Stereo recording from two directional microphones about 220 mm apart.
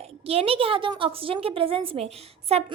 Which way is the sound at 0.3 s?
25° right (ahead or behind).